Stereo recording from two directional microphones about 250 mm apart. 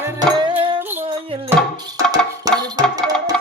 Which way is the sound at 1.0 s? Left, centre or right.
Right.